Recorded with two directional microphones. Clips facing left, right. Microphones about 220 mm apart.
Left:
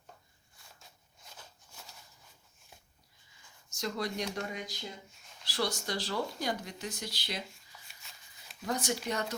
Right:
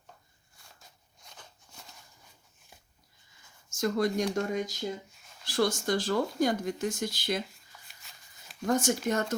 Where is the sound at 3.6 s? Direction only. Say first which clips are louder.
Right 8 dB; 50° right (ahead or behind).